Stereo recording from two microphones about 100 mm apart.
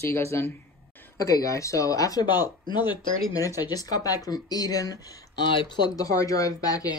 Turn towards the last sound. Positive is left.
turn(degrees=35)  # may be behind; listen again after turning